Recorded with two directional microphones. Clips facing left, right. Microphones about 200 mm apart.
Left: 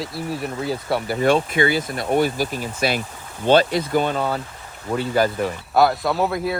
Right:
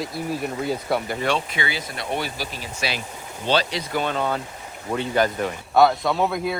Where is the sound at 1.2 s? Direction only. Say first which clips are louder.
Left 7 dB; 50° left (ahead or behind).